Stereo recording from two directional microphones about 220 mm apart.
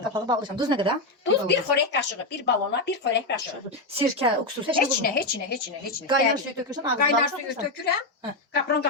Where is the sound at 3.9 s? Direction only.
25° right (ahead or behind).